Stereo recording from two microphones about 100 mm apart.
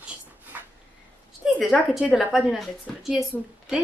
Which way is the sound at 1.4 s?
5° right (ahead or behind).